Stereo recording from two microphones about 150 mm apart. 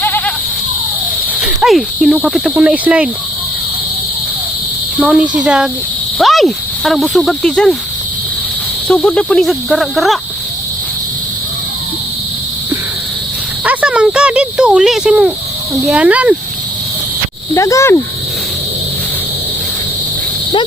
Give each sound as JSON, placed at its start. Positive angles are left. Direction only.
{"t": 0.0, "sound": "goat", "side_deg": 10}
{"t": 1.4, "sound": "speech", "side_deg": 0}
{"t": 4.9, "sound": "speech", "side_deg": -10}
{"t": 8.9, "sound": "speech", "side_deg": 5}
{"t": 13.7, "sound": "a sound", "side_deg": -5}
{"t": 15.9, "sound": "speech", "side_deg": -10}
{"t": 17.5, "sound": "speech", "side_deg": 20}